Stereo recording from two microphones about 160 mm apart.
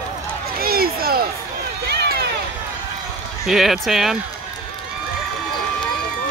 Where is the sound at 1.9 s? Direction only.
80° right.